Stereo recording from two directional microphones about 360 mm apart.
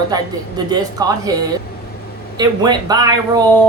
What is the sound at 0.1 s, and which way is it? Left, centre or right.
Speech, centre.